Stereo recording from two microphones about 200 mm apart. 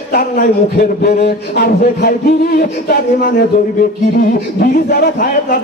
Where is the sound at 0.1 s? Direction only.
50° left (ahead or behind).